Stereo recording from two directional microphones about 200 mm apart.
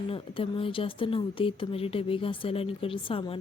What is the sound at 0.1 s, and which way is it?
Speech, 25° left (ahead or behind).